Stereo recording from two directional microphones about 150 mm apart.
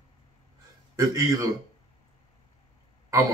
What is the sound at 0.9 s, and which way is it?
Speech, 20° right (ahead or behind).